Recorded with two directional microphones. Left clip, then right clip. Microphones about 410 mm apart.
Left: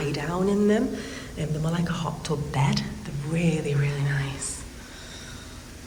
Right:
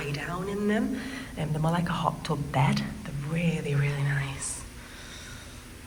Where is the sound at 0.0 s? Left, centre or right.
Centre.